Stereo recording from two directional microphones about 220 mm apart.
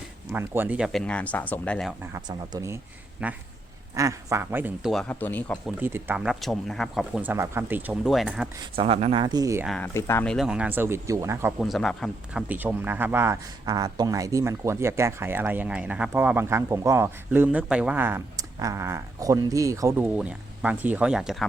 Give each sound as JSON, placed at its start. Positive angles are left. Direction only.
{"t": 0.3, "sound": "speech", "side_deg": -10}
{"t": 2.1, "sound": "speech", "side_deg": -15}
{"t": 3.2, "sound": "speech", "side_deg": -5}
{"t": 5.7, "sound": "speech", "side_deg": -10}
{"t": 8.7, "sound": "speech", "side_deg": -25}
{"t": 9.6, "sound": "speech", "side_deg": 5}
{"t": 11.6, "sound": "speech", "side_deg": 0}